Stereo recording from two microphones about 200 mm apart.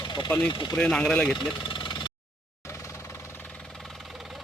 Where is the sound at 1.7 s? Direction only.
25° left (ahead or behind).